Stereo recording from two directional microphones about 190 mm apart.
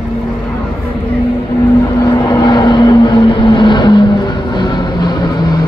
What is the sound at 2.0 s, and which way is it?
Vehicle, 20° left (ahead or behind).